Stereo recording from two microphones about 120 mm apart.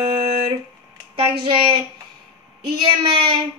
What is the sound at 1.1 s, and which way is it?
Speech, 50° right (ahead or behind).